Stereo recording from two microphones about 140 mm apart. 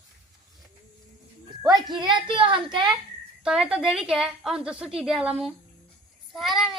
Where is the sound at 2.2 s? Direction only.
35° right (ahead or behind).